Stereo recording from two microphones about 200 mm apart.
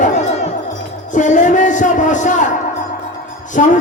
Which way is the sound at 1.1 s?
40° left (ahead or behind).